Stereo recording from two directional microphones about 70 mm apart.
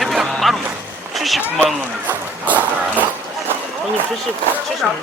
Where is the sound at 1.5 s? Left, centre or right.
Right.